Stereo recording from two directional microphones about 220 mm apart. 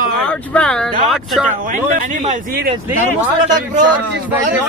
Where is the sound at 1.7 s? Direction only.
35° right (ahead or behind).